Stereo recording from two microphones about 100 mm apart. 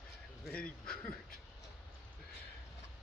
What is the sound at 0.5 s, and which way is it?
Speech, 10° left (ahead or behind).